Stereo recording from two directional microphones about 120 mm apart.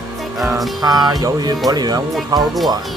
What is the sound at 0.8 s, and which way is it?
Speech, 35° right (ahead or behind).